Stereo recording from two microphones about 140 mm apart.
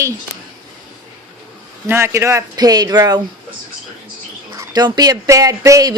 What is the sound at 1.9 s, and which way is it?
Speech, 20° right (ahead or behind).